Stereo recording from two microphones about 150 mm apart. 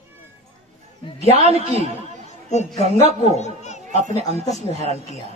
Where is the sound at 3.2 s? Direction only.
45° left (ahead or behind).